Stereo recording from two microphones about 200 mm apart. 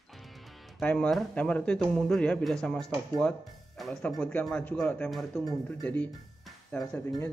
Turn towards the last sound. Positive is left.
turn(degrees=5)  # may be behind; listen again after turning